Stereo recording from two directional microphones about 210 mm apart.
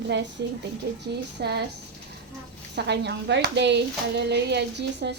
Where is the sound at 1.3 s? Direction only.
50° right (ahead or behind).